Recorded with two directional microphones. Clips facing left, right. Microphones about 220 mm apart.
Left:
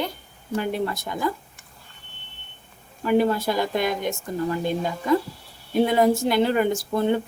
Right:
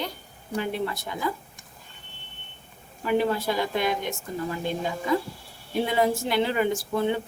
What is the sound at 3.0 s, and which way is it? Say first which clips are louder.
Speech: left 4 dB; 45° left (ahead or behind).